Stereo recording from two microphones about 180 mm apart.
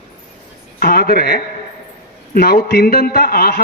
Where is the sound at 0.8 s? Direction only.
55° left (ahead or behind).